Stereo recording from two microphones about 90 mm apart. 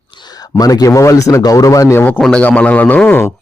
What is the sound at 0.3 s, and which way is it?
A man's voice, 45° left (ahead or behind).